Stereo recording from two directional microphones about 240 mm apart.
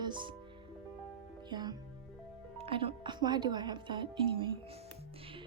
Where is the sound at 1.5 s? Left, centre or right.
Centre.